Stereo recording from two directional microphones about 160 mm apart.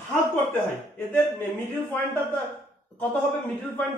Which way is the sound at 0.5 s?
10° left (ahead or behind).